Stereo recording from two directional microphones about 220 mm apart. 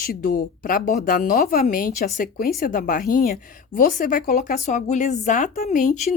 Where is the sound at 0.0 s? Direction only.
40° left (ahead or behind).